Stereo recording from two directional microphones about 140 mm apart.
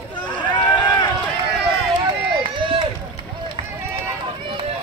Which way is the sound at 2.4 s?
35° right (ahead or behind).